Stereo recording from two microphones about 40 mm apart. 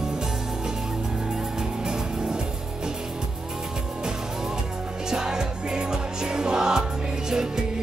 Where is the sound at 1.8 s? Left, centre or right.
Centre.